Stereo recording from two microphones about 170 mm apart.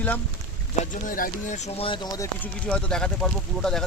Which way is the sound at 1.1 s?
55° left (ahead or behind).